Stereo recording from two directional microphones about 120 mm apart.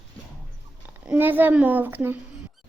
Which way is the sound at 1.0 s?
15° right (ahead or behind).